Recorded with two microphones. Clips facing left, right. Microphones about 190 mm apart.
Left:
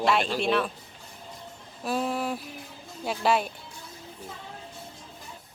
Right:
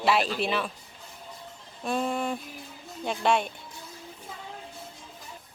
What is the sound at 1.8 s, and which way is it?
A woman's voice, 5° left (ahead or behind).